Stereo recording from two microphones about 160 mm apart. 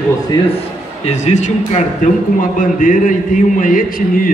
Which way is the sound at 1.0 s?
45° left (ahead or behind).